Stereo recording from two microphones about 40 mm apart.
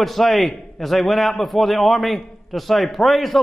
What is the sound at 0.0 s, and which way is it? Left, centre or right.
A man's voice, centre.